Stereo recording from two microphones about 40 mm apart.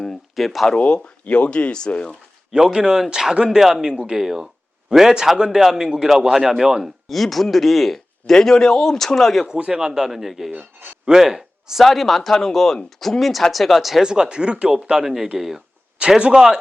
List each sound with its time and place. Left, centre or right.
0.3 s speech: centre
1.3 s speech: left
2.5 s a man's voice: centre
3.6 s a man's voice: centre
9.6 s a man's voice: centre
11.9 s speech: centre
14.0 s speech: centre
14.8 s a man's voice: centre
16.0 s a man's voice: right